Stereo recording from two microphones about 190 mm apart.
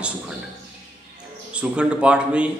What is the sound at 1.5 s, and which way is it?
Speech, 5° right (ahead or behind).